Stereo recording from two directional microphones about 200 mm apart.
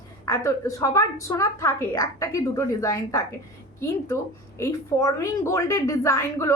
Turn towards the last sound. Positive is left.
turn(degrees=15)  # may be behind; listen again after turning